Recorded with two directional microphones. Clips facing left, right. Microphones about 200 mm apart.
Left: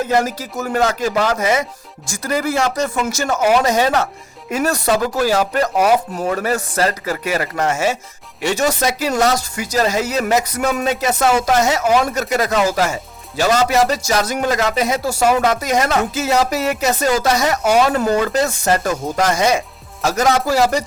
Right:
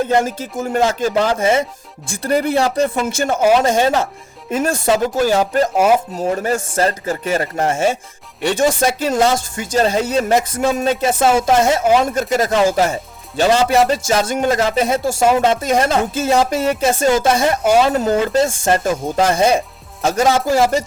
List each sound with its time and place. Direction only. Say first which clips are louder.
0.3 s speech: right 1 dB; 25° right (ahead or behind)